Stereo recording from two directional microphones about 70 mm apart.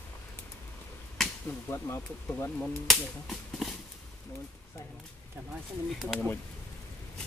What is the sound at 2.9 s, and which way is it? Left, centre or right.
Speech, centre.